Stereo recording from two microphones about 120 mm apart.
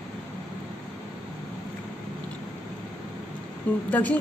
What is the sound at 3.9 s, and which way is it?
Speech, 10° left (ahead or behind).